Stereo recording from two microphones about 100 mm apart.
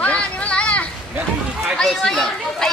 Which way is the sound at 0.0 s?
10° left (ahead or behind).